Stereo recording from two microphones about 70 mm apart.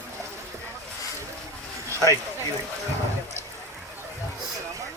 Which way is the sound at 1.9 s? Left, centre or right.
Right.